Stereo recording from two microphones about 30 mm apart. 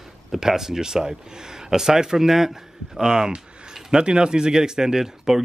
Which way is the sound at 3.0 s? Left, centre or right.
Right.